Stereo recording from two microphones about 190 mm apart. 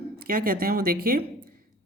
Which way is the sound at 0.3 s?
50° right (ahead or behind).